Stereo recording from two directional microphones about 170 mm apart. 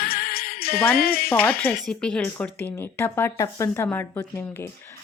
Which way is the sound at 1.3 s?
10° left (ahead or behind).